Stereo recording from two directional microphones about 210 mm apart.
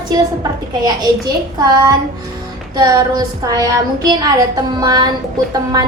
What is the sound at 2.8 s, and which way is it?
A woman's voice, 15° right (ahead or behind).